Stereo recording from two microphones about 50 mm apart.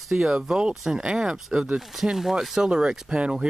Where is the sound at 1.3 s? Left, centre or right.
Centre.